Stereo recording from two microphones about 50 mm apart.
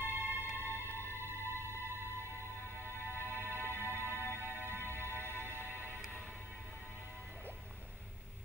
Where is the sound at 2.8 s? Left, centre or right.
Right.